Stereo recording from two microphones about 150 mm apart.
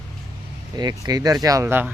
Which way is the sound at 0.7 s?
25° right (ahead or behind).